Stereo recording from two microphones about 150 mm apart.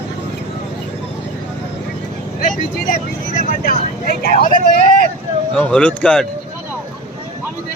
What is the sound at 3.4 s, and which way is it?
Speech, 70° left (ahead or behind).